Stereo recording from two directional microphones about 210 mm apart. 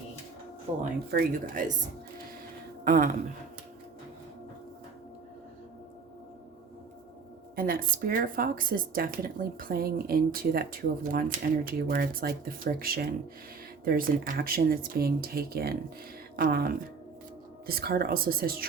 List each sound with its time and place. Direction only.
0.7 s speech: 30° right (ahead or behind)
2.8 s speech: 40° right (ahead or behind)
7.5 s speech: 45° right (ahead or behind)